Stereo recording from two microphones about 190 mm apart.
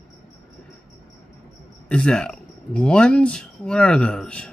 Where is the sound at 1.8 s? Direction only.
5° left (ahead or behind).